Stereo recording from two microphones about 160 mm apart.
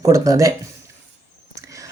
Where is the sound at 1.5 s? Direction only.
20° right (ahead or behind).